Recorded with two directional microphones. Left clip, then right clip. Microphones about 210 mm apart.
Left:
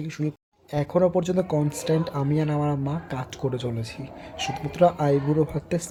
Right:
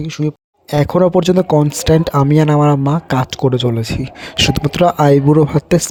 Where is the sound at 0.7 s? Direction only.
45° right (ahead or behind).